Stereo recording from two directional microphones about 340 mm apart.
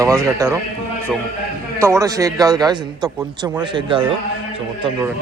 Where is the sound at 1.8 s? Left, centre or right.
Centre.